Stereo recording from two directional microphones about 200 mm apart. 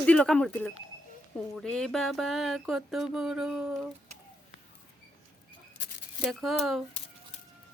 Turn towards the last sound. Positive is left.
turn(degrees=0)  # may be behind; listen again after turning